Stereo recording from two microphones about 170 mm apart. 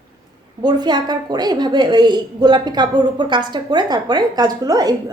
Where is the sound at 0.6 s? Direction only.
25° right (ahead or behind).